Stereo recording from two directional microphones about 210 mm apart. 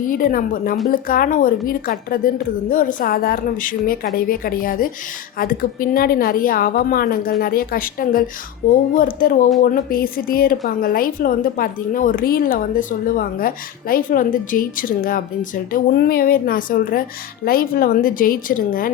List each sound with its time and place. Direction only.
0.1 s a woman's voice: 40° left (ahead or behind)